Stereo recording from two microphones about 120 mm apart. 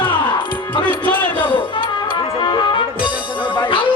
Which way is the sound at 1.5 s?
45° left (ahead or behind).